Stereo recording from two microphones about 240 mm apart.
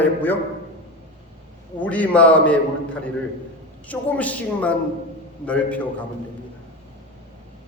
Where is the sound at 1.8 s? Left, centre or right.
Centre.